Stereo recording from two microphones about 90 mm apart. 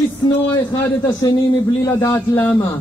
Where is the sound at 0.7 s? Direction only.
50° left (ahead or behind).